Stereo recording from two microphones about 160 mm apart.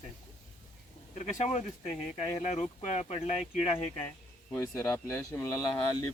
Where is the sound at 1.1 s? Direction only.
45° left (ahead or behind).